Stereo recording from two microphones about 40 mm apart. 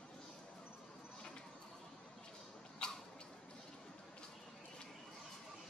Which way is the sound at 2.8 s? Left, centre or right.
Left.